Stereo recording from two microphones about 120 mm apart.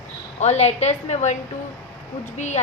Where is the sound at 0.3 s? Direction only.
70° left (ahead or behind).